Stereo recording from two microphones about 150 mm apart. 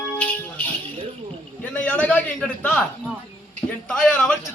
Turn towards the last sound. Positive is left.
turn(degrees=5)  # may be behind; listen again after turning